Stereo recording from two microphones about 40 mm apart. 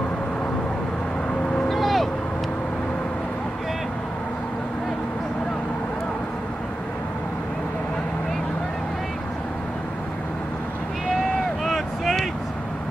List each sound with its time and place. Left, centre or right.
1.7 s vehicle: centre
11.6 s vehicle: centre